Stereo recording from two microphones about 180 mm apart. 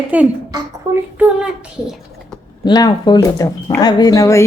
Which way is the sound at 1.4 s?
5° right (ahead or behind).